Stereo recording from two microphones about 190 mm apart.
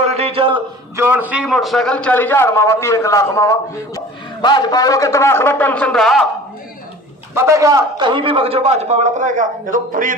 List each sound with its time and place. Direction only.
0.0 s a sound: 35° right (ahead or behind)
0.9 s a man's voice: 10° right (ahead or behind)
7.3 s a man's voice: 15° right (ahead or behind); by 10.2 s 45° right (ahead or behind)